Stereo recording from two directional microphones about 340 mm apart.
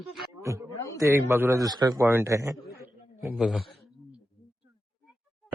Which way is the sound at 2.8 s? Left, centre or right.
Centre.